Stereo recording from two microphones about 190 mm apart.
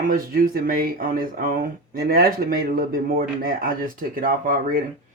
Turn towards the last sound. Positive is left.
turn(degrees=-45)  # may be behind; listen again after turning